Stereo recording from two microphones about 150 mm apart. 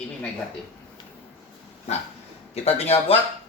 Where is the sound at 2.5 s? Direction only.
45° left (ahead or behind).